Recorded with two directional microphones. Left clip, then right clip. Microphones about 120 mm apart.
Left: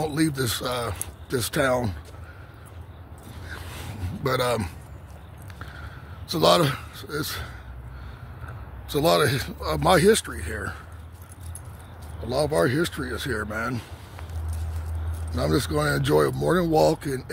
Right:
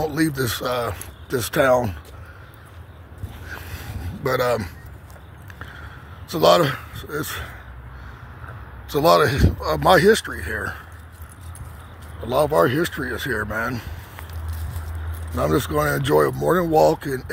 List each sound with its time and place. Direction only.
0.1 s speech: 5° left (ahead or behind)
3.5 s a sound: 30° left (ahead or behind)
4.2 s speech: 20° left (ahead or behind)
5.6 s a sound: 15° left (ahead or behind)
6.3 s speech: 15° left (ahead or behind)
8.8 s speech: 5° left (ahead or behind)
12.2 s speech: 5° left (ahead or behind)
15.3 s speech: 10° left (ahead or behind)